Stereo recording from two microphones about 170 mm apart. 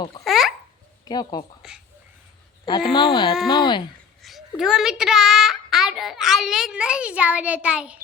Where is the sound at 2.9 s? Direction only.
25° left (ahead or behind).